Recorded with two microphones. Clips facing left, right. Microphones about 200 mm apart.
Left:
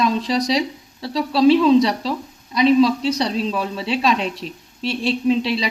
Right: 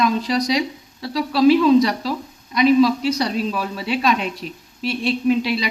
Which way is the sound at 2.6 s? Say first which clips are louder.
Even; 30° left (ahead or behind).